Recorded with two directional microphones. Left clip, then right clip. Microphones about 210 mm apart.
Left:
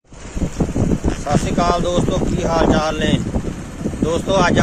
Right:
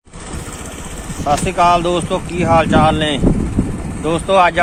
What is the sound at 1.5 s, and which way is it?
Speech, 10° left (ahead or behind).